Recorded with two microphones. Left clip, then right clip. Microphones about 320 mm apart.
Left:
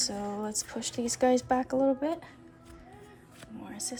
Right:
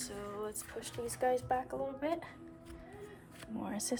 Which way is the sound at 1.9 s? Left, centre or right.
Centre.